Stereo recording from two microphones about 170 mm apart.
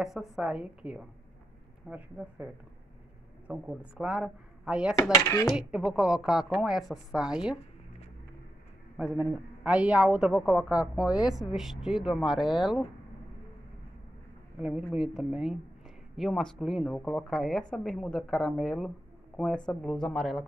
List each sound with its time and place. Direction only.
0.0 s a woman's voice: centre (ahead or behind)
5.1 s speech: 15° left (ahead or behind)
5.6 s a woman's voice: 5° right (ahead or behind)
8.9 s a woman's voice: 10° right (ahead or behind)
14.6 s a woman's voice: 5° right (ahead or behind)